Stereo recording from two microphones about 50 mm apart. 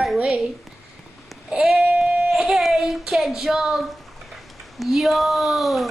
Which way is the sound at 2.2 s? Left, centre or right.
Centre.